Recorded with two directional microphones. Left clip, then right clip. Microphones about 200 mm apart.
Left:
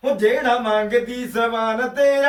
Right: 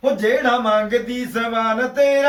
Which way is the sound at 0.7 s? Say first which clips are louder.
Right 1 dB; 15° left (ahead or behind).